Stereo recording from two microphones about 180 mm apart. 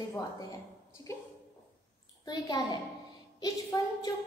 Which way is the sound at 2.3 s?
25° left (ahead or behind).